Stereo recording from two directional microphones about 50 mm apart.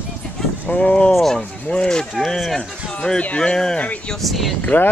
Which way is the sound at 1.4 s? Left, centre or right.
Left.